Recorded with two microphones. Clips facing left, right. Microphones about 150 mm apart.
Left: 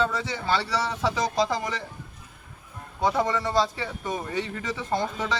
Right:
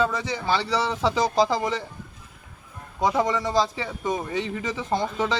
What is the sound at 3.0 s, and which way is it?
A man's voice, 15° right (ahead or behind).